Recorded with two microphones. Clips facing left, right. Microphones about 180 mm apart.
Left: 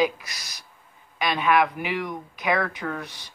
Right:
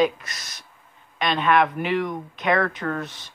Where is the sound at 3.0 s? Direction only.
25° right (ahead or behind).